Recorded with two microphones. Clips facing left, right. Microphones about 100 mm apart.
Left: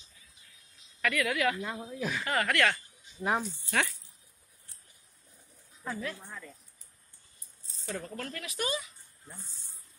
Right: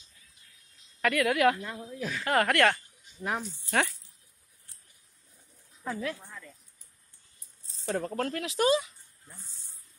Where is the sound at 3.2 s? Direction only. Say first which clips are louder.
Left 3 dB; 15° left (ahead or behind).